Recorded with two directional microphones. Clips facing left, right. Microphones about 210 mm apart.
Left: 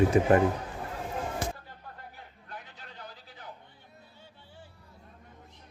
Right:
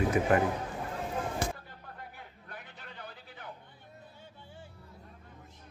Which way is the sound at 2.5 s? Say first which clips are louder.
Left 2 dB; 55° right (ahead or behind).